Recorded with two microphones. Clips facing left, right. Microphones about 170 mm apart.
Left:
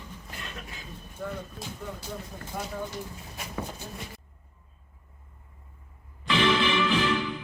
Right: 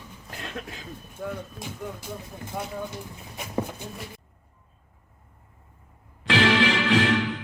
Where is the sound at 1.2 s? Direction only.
10° right (ahead or behind).